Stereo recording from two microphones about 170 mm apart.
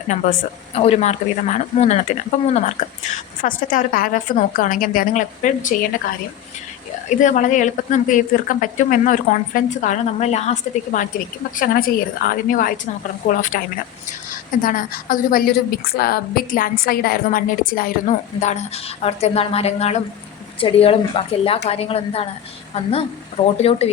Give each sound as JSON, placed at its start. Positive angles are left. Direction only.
{"t": 0.1, "sound": "speech", "side_deg": 40}
{"t": 3.4, "sound": "a woman's voice", "side_deg": 55}
{"t": 7.2, "sound": "a woman's voice", "side_deg": 50}
{"t": 11.5, "sound": "a woman's voice", "side_deg": 60}
{"t": 14.6, "sound": "a woman's voice", "side_deg": 55}
{"t": 18.3, "sound": "a woman's voice", "side_deg": 45}